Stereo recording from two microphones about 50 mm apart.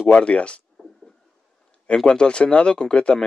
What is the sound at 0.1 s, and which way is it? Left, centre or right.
Speech, left.